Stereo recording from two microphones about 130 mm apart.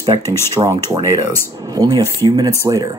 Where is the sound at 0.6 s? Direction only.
30° right (ahead or behind).